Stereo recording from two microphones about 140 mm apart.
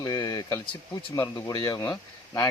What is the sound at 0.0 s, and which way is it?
Speech, 30° left (ahead or behind).